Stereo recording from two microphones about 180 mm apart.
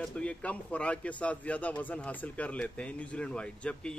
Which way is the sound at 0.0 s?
5° left (ahead or behind).